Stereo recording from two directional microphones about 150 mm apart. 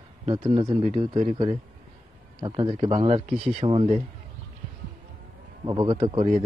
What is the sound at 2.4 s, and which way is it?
Speech, 30° right (ahead or behind).